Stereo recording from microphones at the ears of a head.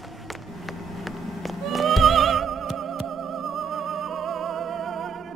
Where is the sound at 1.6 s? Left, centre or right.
Right.